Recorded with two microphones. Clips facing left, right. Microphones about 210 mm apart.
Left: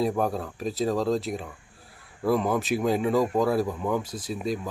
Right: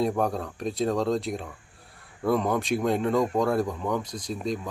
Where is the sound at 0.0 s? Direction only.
Centre (ahead or behind).